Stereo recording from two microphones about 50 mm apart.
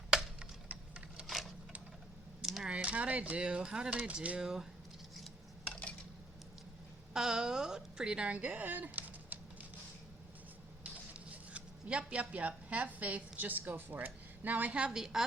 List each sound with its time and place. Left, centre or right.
0.7 s a sound: right
1.3 s a sound: centre
2.6 s speech: right
4.4 s speech: centre
7.1 s a woman's voice: centre; by 9.4 s right
11.1 s speech: right
14.9 s speech: centre